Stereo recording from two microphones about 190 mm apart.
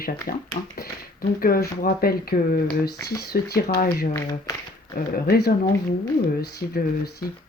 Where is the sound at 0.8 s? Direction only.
50° left (ahead or behind).